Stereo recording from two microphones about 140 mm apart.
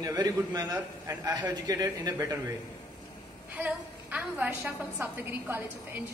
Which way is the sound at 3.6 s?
10° right (ahead or behind).